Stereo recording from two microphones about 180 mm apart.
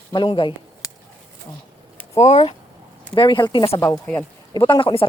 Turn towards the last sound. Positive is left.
turn(degrees=25)  # may be behind; listen again after turning